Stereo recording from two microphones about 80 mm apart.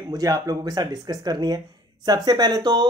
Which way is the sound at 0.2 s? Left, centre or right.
Right.